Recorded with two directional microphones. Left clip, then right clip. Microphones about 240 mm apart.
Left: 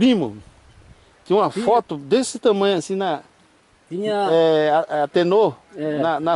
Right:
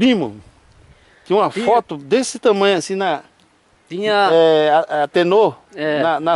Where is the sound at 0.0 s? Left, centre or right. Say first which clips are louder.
Right 2 dB; centre.